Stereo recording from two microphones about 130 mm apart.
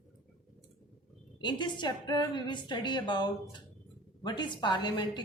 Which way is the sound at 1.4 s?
35° left (ahead or behind).